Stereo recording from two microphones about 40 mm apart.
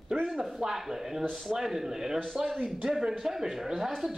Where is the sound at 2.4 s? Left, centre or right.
Centre.